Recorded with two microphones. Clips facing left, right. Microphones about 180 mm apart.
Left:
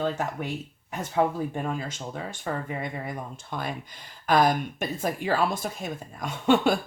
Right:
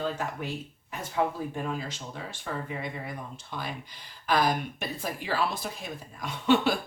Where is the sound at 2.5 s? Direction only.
50° left (ahead or behind).